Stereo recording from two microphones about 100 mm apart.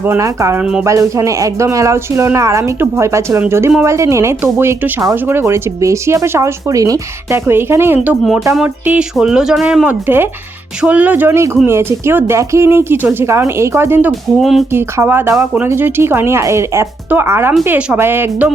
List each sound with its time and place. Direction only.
0.2 s speech: 30° right (ahead or behind)
0.6 s speech: 10° right (ahead or behind)
0.9 s speech: 30° right (ahead or behind)
7.3 s speech: 25° right (ahead or behind)
9.1 s speech: 5° right (ahead or behind); by 14.1 s 25° right (ahead or behind)
14.1 s speech: centre (ahead or behind)
14.7 s speech: 25° right (ahead or behind)
17.7 s speech: 10° right (ahead or behind)